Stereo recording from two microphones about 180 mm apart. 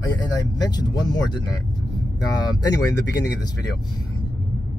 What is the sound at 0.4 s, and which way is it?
Speech, 20° left (ahead or behind).